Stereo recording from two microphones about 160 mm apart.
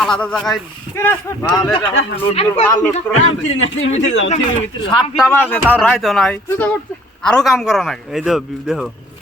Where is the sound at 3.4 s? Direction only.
45° left (ahead or behind).